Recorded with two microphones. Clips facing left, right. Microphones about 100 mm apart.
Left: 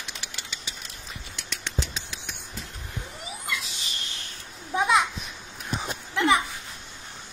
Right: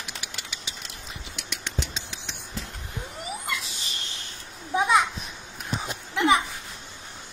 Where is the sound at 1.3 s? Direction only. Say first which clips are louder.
Left 1 dB; 15° right (ahead or behind).